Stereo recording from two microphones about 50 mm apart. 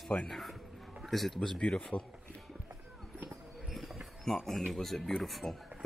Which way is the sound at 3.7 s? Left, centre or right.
Centre.